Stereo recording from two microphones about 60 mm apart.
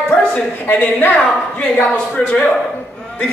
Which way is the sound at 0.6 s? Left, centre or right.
Left.